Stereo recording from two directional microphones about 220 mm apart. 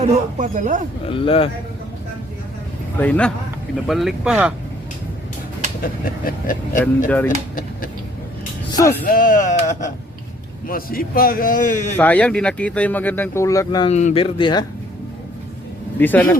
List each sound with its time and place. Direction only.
0.0 s speech: 35° right (ahead or behind)
1.1 s speech: 25° left (ahead or behind)
3.0 s speech: 5° left (ahead or behind)
5.8 s speech: 40° left (ahead or behind)
8.7 s music: 15° left (ahead or behind)
9.0 s speech: 40° left (ahead or behind)
11.9 s speech: 5° left (ahead or behind)
13.9 s speech: 30° left (ahead or behind)
16.0 s speech: 10° left (ahead or behind)